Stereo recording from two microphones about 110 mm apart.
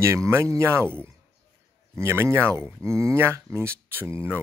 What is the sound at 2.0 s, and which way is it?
Speech, 25° right (ahead or behind).